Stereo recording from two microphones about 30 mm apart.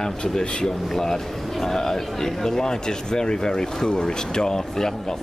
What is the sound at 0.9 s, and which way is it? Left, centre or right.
Speech, centre.